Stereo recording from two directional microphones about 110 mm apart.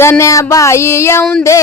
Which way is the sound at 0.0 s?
25° left (ahead or behind).